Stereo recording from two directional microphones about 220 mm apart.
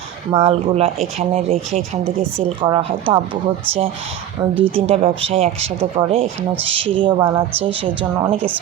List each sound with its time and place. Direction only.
0.3 s speech: 25° right (ahead or behind)
4.6 s speech: 25° right (ahead or behind)